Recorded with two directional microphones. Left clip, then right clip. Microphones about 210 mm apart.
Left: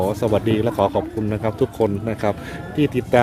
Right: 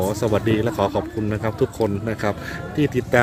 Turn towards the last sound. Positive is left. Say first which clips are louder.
# left 1 dB
turn(degrees=10)  # may be behind; listen again after turning